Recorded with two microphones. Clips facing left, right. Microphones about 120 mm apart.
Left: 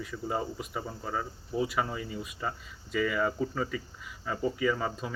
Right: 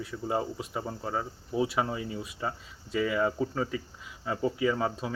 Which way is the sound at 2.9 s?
25° right (ahead or behind).